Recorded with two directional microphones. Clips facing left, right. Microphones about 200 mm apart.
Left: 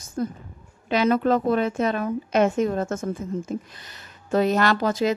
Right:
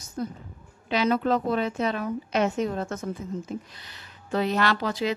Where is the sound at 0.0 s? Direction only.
50° left (ahead or behind).